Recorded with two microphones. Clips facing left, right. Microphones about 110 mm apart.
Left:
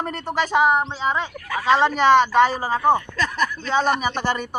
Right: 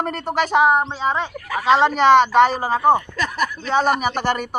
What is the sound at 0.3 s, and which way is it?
Speech, 15° right (ahead or behind).